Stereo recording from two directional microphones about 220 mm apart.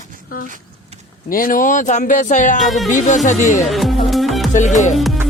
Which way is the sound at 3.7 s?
Centre (ahead or behind).